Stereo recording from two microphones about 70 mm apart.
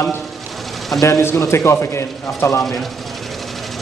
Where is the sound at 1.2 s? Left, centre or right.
Left.